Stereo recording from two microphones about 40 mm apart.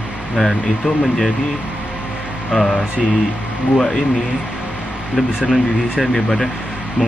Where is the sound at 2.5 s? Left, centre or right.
Centre.